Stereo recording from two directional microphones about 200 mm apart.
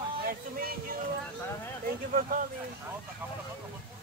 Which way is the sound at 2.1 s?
45° right (ahead or behind).